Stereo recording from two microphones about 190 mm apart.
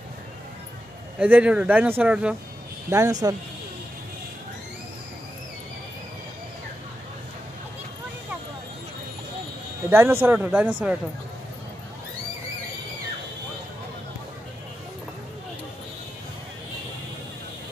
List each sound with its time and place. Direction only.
1.2 s speech: 5° right (ahead or behind)
2.9 s speech: 15° right (ahead or behind)
9.8 s speech: 10° right (ahead or behind)